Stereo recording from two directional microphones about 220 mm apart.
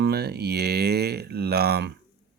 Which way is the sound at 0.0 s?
45° right (ahead or behind).